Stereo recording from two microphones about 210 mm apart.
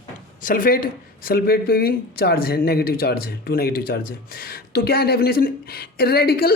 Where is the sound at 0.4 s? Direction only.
40° left (ahead or behind).